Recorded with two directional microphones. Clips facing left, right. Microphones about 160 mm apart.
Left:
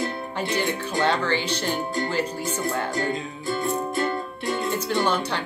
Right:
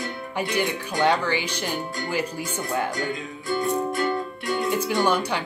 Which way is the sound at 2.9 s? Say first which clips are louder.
Left 2 dB; 30° left (ahead or behind).